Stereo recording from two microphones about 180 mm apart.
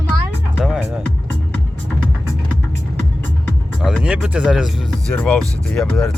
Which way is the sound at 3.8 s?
Centre (ahead or behind).